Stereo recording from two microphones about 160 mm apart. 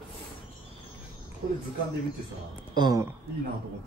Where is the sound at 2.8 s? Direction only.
25° right (ahead or behind).